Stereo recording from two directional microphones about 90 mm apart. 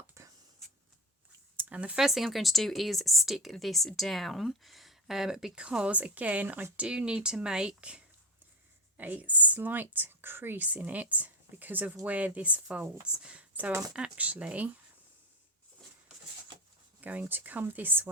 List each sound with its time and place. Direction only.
0.1 s writing: 35° right (ahead or behind)
1.5 s speech: 15° right (ahead or behind)
17.0 s speech: 15° right (ahead or behind)